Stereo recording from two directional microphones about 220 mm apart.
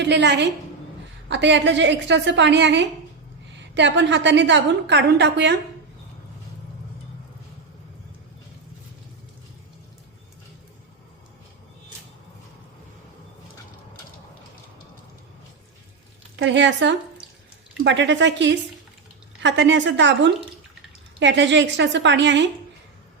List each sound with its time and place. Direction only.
0.0 s a woman's voice: 50° right (ahead or behind)
16.4 s a woman's voice: 55° right (ahead or behind)